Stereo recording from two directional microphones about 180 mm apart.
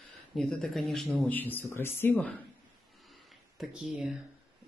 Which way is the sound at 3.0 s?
Centre (ahead or behind).